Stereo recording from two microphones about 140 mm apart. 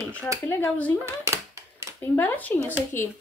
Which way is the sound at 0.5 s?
15° left (ahead or behind).